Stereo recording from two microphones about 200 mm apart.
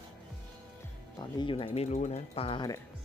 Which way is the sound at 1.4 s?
25° left (ahead or behind).